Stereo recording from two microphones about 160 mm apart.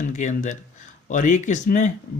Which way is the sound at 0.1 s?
50° left (ahead or behind).